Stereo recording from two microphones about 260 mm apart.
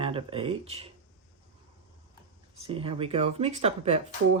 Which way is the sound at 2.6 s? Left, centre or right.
Right.